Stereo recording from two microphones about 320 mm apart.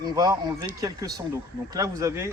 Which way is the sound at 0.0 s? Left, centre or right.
Centre.